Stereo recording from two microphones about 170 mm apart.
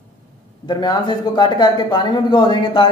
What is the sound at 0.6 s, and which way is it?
A man's voice, 25° left (ahead or behind).